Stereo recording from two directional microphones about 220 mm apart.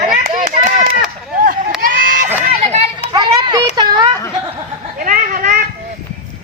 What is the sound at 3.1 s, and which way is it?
Children playing, 20° right (ahead or behind).